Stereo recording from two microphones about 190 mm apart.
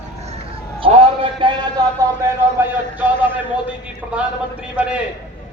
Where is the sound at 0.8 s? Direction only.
25° right (ahead or behind).